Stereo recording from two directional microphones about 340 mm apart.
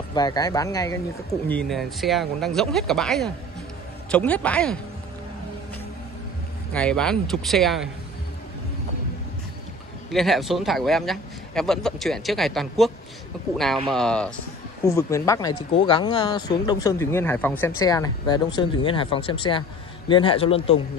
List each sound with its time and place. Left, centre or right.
0.1 s speech: centre
6.7 s speech: centre
10.1 s speech: centre
13.9 s speech: centre